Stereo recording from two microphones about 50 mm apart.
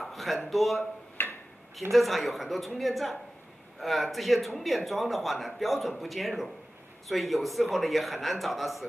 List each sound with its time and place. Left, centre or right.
0.0 s a sound: centre
0.5 s a man's voice: centre
1.2 s tick-tock: left
1.8 s a man's voice: centre